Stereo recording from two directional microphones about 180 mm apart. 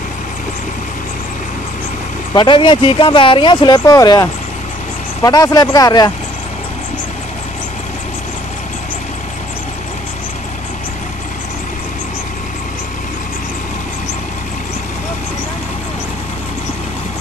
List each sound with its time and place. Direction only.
2.3 s speech: 25° left (ahead or behind)